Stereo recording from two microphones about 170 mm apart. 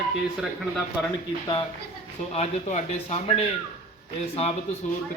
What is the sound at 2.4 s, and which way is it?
A man's voice, 35° left (ahead or behind).